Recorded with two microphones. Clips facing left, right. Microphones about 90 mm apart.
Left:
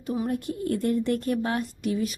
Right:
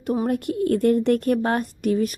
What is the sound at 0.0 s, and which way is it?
A woman's voice, 55° right (ahead or behind).